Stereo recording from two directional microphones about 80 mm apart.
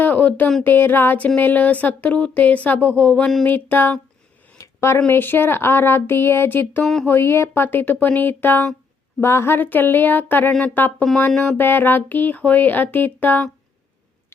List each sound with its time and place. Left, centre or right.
0.0 s speech: left
4.5 s speech: left
6.8 s speech: centre
7.1 s speech: left